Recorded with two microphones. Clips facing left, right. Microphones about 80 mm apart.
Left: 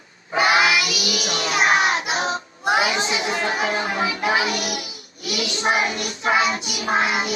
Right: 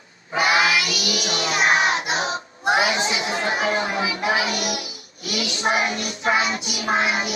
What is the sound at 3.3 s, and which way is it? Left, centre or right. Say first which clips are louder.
Music: right 1 dB; right.